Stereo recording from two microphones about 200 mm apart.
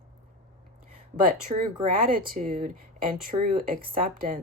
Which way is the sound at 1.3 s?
40° right (ahead or behind).